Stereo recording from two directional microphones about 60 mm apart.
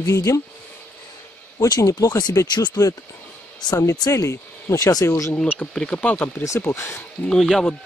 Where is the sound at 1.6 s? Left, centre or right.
Left.